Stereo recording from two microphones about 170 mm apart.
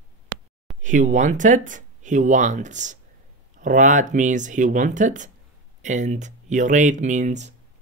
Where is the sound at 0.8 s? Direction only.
45° right (ahead or behind).